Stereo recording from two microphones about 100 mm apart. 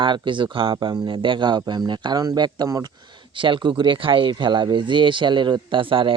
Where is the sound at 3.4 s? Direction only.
55° right (ahead or behind).